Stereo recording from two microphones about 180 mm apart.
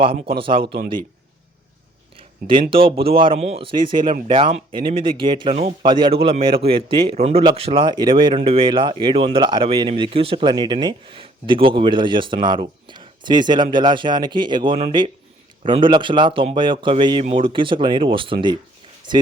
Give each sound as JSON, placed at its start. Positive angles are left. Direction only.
{"t": 0.0, "sound": "speech", "side_deg": -30}
{"t": 2.1, "sound": "speech", "side_deg": -30}